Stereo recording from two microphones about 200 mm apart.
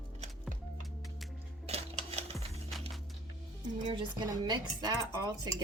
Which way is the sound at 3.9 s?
25° right (ahead or behind).